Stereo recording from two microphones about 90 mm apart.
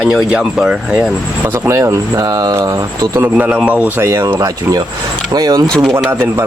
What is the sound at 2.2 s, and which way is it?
Speech, 45° right (ahead or behind).